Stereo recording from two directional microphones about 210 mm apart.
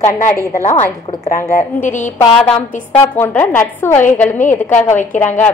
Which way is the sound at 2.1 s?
5° left (ahead or behind).